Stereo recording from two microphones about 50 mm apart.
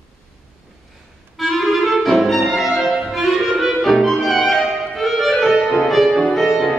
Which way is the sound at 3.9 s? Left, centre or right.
Centre.